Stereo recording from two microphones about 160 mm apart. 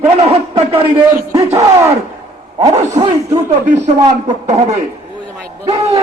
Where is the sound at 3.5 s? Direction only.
45° right (ahead or behind).